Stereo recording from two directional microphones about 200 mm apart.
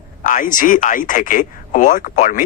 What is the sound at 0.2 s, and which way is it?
Speech, 40° left (ahead or behind).